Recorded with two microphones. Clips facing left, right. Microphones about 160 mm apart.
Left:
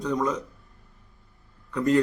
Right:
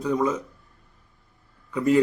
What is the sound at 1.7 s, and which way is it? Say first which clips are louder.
Speech: right 1 dB; 5° right (ahead or behind).